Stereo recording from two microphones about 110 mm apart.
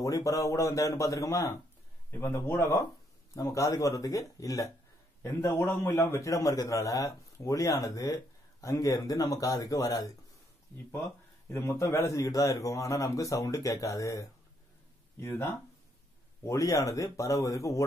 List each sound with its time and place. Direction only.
0.0 s a man's voice: 30° left (ahead or behind)
11.4 s a man's voice: 25° left (ahead or behind)